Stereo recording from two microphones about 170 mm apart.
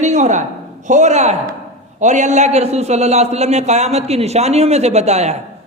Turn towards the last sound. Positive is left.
turn(degrees=-40)  # may be behind; listen again after turning